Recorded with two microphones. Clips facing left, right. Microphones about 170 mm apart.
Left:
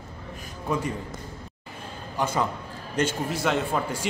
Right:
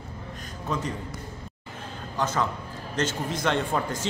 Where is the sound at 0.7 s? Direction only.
10° left (ahead or behind).